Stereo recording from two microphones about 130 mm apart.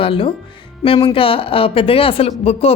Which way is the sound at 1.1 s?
45° left (ahead or behind).